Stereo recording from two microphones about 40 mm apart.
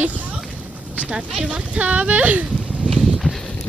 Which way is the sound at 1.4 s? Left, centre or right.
Right.